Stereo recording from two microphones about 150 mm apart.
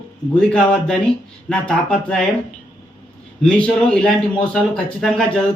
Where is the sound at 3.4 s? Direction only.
5° left (ahead or behind).